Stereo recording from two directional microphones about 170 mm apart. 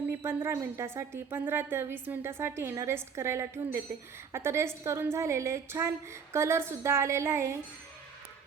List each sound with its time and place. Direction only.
0.2 s a woman's voice: 15° right (ahead or behind)